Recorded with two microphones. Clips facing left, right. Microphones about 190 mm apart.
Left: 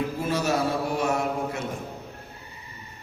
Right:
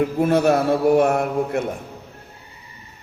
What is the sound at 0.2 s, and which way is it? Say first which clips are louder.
A man's voice: right 9 dB; 55° right (ahead or behind).